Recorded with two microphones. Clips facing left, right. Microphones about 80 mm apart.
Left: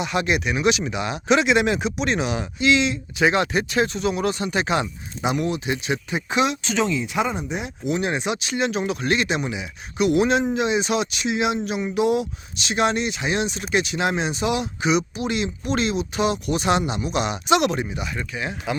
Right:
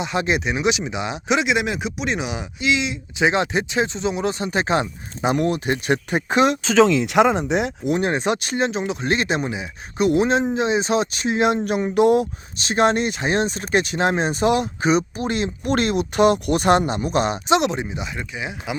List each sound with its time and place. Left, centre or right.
0.0 s speech: right; by 3.0 s centre
3.2 s speech: right
6.8 s speech: right
7.9 s speech: right
8.7 s speech: right